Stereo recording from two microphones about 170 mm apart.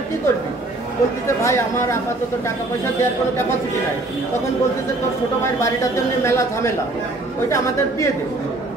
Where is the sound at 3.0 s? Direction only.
15° left (ahead or behind).